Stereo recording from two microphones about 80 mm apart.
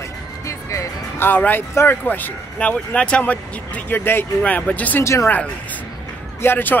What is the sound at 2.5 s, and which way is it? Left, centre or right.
Speech, centre.